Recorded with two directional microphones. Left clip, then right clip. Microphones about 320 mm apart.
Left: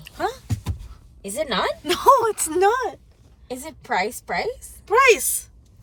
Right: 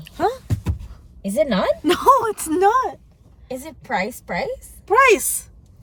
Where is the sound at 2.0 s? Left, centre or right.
Centre.